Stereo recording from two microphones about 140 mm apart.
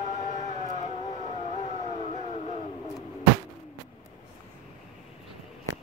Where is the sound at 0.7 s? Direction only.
55° left (ahead or behind).